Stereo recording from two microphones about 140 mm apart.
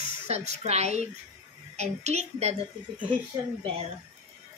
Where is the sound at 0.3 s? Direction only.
50° right (ahead or behind).